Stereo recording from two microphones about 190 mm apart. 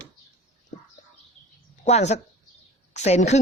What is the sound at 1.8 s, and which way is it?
Speech, 35° left (ahead or behind).